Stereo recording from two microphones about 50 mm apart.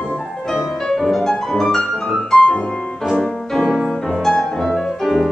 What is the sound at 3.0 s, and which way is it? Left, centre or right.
Music, centre.